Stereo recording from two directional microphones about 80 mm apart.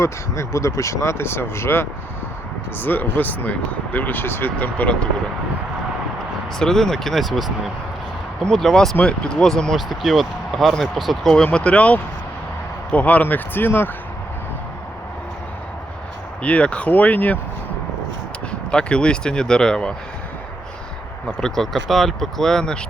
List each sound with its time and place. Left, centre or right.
0.0 s speech: left; by 5.0 s centre
6.6 s speech: centre
11.4 s speech: centre
16.4 s speech: centre
18.7 s speech: centre
21.2 s speech: centre